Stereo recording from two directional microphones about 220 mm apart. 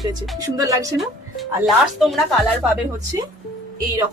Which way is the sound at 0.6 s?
15° right (ahead or behind).